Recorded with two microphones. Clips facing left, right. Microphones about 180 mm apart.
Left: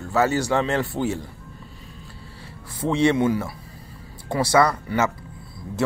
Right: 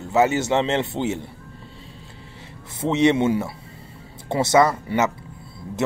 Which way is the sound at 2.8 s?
20° right (ahead or behind).